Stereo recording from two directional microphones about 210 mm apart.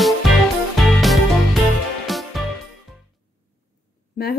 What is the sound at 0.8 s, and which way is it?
Music, centre (ahead or behind).